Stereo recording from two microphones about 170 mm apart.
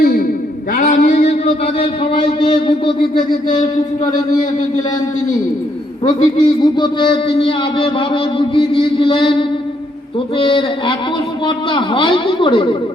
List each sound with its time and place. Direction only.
0.0 s a sound: 60° left (ahead or behind)
0.7 s a man's voice: 55° left (ahead or behind); by 2.9 s 30° left (ahead or behind)
6.1 s a woman's voice: 25° left (ahead or behind)